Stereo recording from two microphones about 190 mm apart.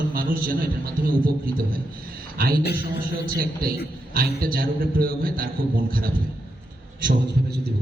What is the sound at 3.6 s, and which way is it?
A man's voice, 50° right (ahead or behind).